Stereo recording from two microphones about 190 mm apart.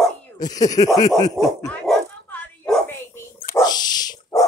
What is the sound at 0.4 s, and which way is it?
Speech, 20° left (ahead or behind).